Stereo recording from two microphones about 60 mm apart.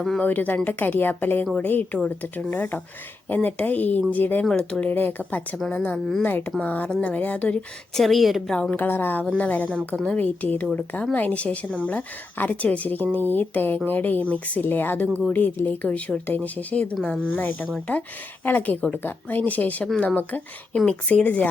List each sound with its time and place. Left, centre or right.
0.2 s a woman's voice: left
4.4 s speech: centre
4.9 s a woman's voice: left; by 8.0 s centre
8.0 s a woman's voice: centre
8.7 s a woman's voice: left
17.3 s a woman's voice: left
20.7 s a woman's voice: centre